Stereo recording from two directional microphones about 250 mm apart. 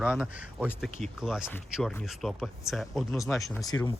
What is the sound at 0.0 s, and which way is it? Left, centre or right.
Speech, centre.